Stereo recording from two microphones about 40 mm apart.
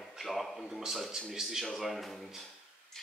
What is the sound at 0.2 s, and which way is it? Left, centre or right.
Speech, centre.